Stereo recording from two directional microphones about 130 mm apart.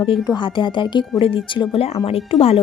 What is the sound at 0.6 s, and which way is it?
A woman's voice, 40° left (ahead or behind).